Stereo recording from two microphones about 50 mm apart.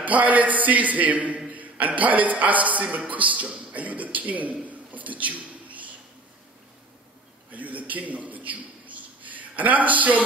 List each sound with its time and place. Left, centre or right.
0.0 s a man's voice: right
7.5 s a man's voice: right